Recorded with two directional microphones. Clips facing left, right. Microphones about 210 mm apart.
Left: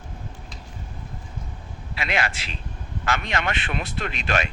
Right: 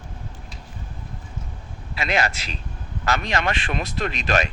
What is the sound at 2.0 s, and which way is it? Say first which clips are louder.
Speech: right 3 dB; 40° right (ahead or behind).